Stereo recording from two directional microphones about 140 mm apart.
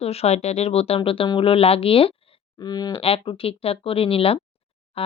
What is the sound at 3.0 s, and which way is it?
Speech, 45° left (ahead or behind).